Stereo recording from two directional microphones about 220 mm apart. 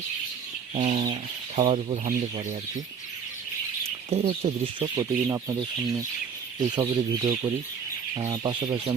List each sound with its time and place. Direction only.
0.7 s chicken: 30° right (ahead or behind)
1.0 s speech: 25° right (ahead or behind)
4.1 s speech: 30° right (ahead or behind)